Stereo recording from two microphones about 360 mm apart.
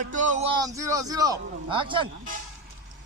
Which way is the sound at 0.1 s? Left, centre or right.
Right.